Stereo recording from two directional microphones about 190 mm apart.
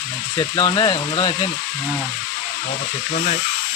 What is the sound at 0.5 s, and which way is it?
Speech, 25° left (ahead or behind).